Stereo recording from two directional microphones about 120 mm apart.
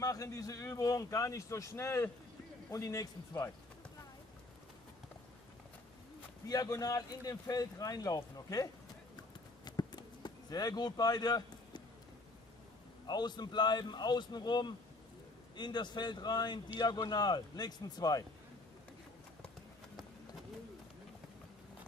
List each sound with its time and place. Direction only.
0.0 s a man's voice: 30° left (ahead or behind)
6.4 s a man's voice: 30° left (ahead or behind)
9.7 s a sound: 35° left (ahead or behind)
13.0 s a man's voice: 35° left (ahead or behind)